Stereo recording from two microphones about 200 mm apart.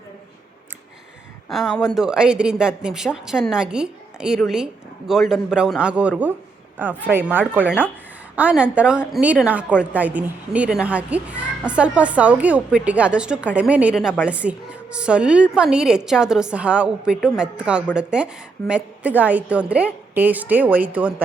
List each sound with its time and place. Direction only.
1.5 s a woman's voice: centre (ahead or behind)